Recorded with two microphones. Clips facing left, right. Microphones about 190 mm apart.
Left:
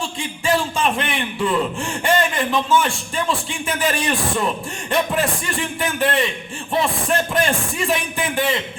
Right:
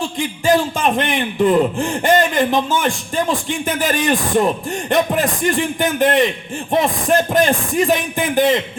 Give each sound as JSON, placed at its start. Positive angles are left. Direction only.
{"t": 0.4, "sound": "a man's voice", "side_deg": -40}
{"t": 2.0, "sound": "a sound", "side_deg": -40}
{"t": 3.8, "sound": "a man's voice", "side_deg": -40}
{"t": 6.0, "sound": "a man's voice", "side_deg": -45}